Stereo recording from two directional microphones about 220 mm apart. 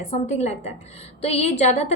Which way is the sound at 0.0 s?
30° left (ahead or behind).